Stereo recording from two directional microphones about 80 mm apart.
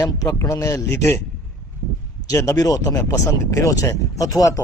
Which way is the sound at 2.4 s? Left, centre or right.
Left.